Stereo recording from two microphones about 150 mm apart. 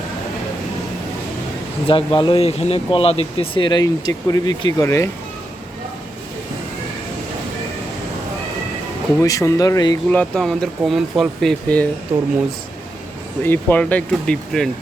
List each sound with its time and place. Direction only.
1.9 s speech: 35° left (ahead or behind)
9.2 s speech: 25° left (ahead or behind)
10.1 s speech: 5° left (ahead or behind)
13.4 s speech: 15° left (ahead or behind)